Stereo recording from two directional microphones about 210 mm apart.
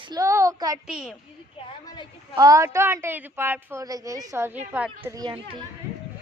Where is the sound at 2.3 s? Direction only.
15° right (ahead or behind).